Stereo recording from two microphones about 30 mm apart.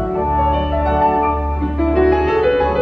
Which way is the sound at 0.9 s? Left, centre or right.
Centre.